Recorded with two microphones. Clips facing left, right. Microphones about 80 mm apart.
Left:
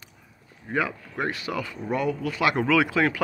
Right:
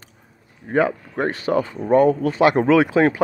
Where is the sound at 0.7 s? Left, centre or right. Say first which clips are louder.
Right 8 dB; right.